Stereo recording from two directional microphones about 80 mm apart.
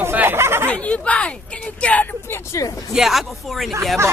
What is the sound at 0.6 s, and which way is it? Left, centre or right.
Speech, centre.